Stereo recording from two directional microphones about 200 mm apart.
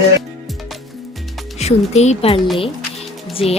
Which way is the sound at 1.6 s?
35° left (ahead or behind).